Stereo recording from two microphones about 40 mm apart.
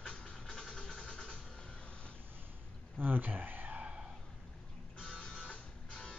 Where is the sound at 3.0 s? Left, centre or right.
Right.